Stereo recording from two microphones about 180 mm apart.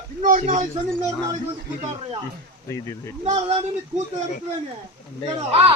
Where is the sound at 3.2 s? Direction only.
35° right (ahead or behind).